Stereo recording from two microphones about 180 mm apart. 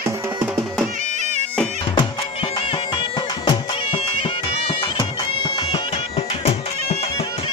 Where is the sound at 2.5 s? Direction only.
25° left (ahead or behind).